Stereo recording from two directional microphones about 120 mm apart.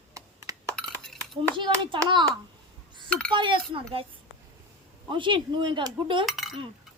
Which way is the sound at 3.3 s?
40° right (ahead or behind).